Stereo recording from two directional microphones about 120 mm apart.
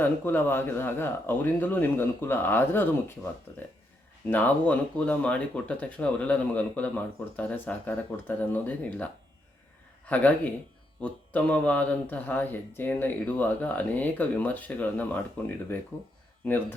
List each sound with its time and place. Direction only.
0.0 s speech: 15° left (ahead or behind)
10.1 s speech: 15° left (ahead or behind)